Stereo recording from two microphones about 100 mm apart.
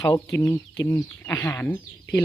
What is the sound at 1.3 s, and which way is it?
Speech, 30° left (ahead or behind).